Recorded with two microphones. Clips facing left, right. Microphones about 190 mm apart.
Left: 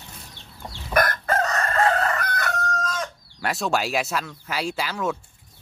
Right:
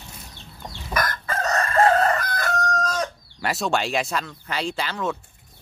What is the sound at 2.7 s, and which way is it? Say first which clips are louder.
Chicken: right 3 dB; 40° right (ahead or behind).